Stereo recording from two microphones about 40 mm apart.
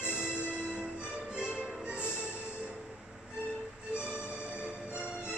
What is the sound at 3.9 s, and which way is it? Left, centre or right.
Music, right.